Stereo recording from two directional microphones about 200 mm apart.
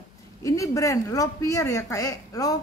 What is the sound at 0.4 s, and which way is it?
Speech, 15° left (ahead or behind).